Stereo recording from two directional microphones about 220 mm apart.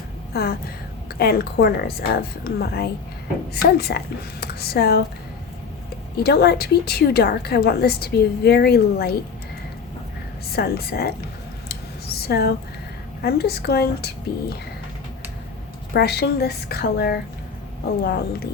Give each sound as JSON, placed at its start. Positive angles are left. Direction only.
{"t": 0.3, "sound": "a woman's voice", "side_deg": 45}
{"t": 6.1, "sound": "a woman's voice", "side_deg": 45}
{"t": 10.5, "sound": "a woman's voice", "side_deg": 45}
{"t": 11.7, "sound": "a sound", "side_deg": 45}
{"t": 13.2, "sound": "a woman's voice", "side_deg": 45}
{"t": 15.9, "sound": "a woman's voice", "side_deg": 45}